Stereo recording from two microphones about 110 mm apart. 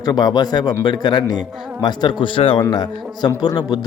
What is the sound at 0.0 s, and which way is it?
A man's voice, 40° left (ahead or behind).